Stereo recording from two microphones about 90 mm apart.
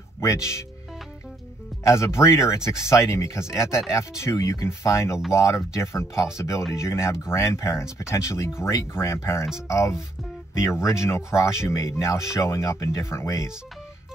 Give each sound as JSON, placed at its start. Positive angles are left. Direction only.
{"t": 0.2, "sound": "speech", "side_deg": 35}
{"t": 1.9, "sound": "speech", "side_deg": 30}